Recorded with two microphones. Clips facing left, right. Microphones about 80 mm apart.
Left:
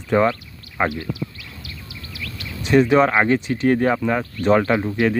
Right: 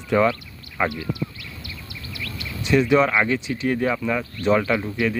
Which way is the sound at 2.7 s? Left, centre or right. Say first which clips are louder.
Left 3 dB; left.